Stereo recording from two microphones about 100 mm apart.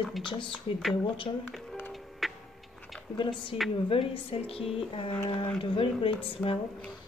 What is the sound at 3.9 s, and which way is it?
A woman's voice, 70° left (ahead or behind).